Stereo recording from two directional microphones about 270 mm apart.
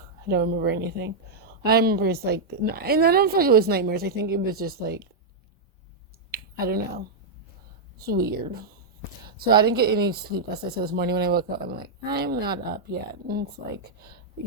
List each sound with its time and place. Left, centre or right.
0.3 s a woman's voice: right
6.3 s finger snapping: right
7.9 s a woman's voice: right
9.4 s a woman's voice: right